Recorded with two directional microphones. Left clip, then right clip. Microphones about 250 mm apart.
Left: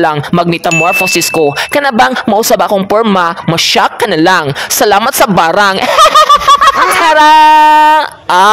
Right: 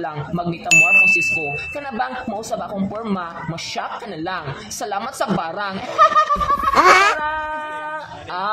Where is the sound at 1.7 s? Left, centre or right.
Left.